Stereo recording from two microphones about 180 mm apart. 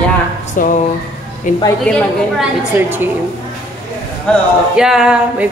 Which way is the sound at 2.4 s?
10° right (ahead or behind).